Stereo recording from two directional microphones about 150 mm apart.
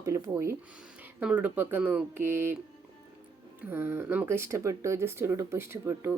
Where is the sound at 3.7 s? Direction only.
15° right (ahead or behind).